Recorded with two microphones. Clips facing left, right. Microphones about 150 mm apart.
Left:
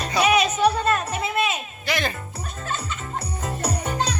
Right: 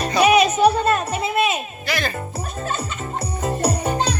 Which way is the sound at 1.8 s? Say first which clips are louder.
Even; 20° left (ahead or behind).